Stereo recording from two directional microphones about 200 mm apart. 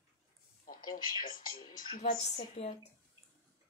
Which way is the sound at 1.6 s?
30° left (ahead or behind).